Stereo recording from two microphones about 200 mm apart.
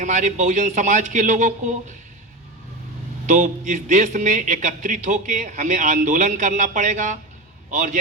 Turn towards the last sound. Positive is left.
turn(degrees=-40)  # may be behind; listen again after turning